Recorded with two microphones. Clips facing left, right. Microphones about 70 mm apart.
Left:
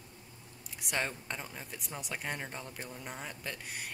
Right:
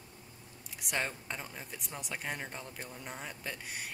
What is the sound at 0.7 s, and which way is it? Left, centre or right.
Speech, centre.